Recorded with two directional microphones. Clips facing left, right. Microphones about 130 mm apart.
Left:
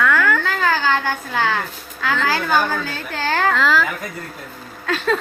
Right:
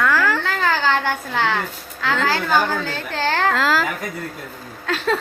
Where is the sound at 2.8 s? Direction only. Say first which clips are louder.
Right 2 dB; 25° right (ahead or behind).